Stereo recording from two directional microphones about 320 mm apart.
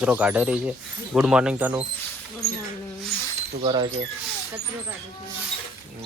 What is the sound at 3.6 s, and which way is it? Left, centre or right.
Speech, centre.